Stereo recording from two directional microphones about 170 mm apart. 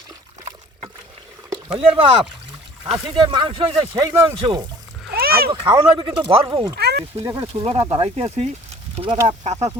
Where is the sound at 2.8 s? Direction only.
30° right (ahead or behind).